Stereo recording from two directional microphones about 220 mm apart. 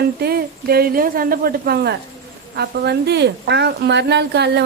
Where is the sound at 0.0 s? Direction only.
45° right (ahead or behind).